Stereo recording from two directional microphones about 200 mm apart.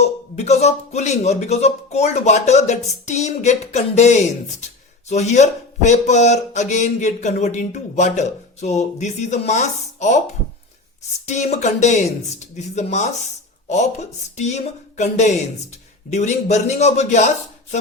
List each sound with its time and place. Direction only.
0.0 s speech: 35° left (ahead or behind)
11.3 s speech: 35° left (ahead or behind)